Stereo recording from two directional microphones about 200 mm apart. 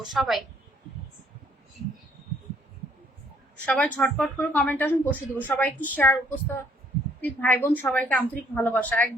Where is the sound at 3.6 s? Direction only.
5° left (ahead or behind).